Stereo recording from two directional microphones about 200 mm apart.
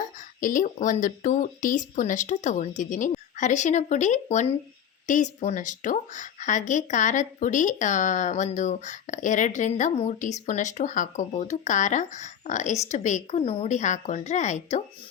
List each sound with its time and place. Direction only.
0.3 s a woman's voice: 40° left (ahead or behind)